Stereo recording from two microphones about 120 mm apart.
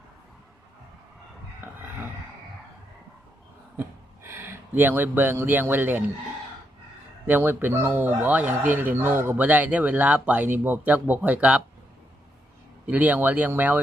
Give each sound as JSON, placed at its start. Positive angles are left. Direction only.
{"t": 3.8, "sound": "speech", "side_deg": -20}
{"t": 7.3, "sound": "speech", "side_deg": -15}
{"t": 12.8, "sound": "speech", "side_deg": -15}